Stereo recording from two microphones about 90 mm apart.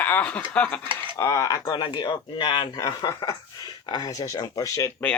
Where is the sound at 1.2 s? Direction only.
35° left (ahead or behind).